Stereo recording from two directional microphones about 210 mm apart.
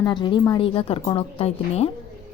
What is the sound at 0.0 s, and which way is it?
Speech, 20° left (ahead or behind).